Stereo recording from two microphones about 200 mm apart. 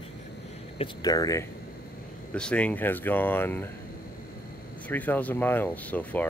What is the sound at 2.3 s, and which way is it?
Speech, 5° left (ahead or behind).